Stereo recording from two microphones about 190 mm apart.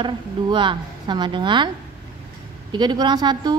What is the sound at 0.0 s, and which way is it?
Speech, 25° right (ahead or behind).